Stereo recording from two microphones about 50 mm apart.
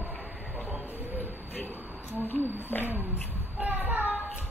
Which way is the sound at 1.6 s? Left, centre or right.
Right.